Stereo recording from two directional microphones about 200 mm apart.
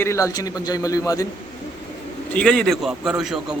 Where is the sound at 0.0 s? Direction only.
15° left (ahead or behind).